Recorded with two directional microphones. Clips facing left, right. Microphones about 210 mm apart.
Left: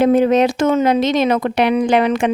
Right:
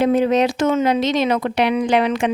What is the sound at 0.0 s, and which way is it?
Speech, 50° left (ahead or behind).